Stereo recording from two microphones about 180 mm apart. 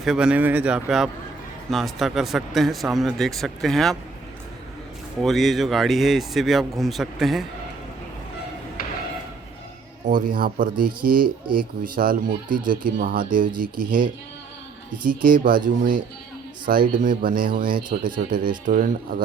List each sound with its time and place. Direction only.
0.0 s speech: centre (ahead or behind)
5.2 s speech: centre (ahead or behind)
8.8 s a sound: 55° left (ahead or behind)
10.1 s speech: 50° right (ahead or behind)
16.6 s speech: 50° right (ahead or behind)